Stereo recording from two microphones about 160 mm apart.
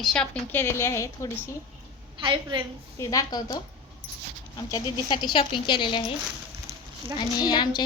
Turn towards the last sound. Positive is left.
turn(degrees=25)  # may be behind; listen again after turning